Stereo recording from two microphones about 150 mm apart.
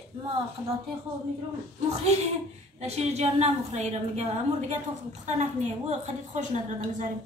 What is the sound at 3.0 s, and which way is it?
A woman's voice, 45° right (ahead or behind).